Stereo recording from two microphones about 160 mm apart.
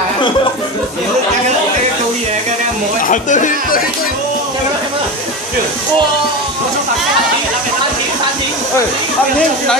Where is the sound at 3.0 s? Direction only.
50° left (ahead or behind).